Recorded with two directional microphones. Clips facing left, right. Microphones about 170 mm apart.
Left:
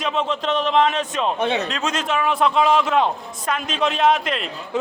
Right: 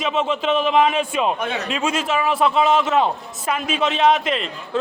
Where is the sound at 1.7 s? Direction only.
5° right (ahead or behind).